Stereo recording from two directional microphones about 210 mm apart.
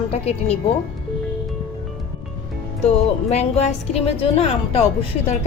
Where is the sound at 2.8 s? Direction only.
30° left (ahead or behind).